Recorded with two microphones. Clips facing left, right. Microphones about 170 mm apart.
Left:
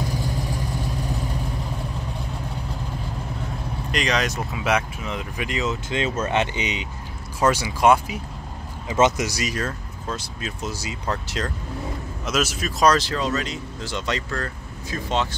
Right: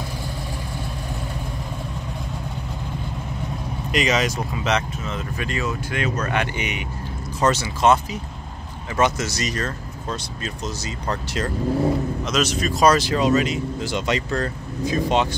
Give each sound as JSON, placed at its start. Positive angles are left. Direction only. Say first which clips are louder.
{"t": 3.9, "sound": "speech", "louder": "right 3 dB", "side_deg": -5}
{"t": 12.9, "sound": "speech", "louder": "right 5 dB", "side_deg": -15}